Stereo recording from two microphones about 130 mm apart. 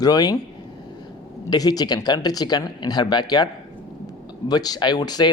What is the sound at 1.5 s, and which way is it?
A man's voice, 30° left (ahead or behind).